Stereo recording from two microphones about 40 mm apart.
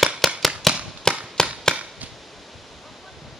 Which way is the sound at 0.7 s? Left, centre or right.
Centre.